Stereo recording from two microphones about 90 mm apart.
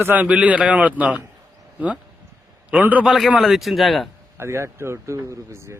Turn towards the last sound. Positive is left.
turn(degrees=-30)  # may be behind; listen again after turning